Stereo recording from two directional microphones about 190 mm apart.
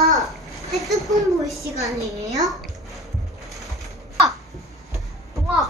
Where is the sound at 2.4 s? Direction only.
Centre (ahead or behind).